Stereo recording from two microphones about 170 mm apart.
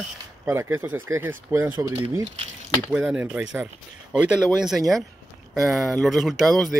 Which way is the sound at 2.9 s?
10° right (ahead or behind).